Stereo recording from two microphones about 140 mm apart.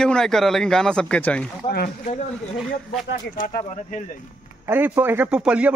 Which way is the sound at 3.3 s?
80° left.